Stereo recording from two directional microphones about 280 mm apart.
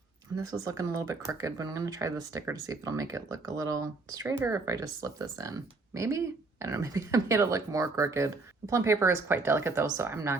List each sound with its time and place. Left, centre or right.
0.3 s speech: centre